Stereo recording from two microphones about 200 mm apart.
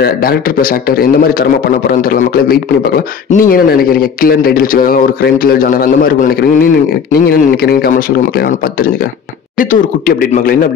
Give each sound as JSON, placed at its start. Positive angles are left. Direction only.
{"t": 0.0, "sound": "a man's voice", "side_deg": 50}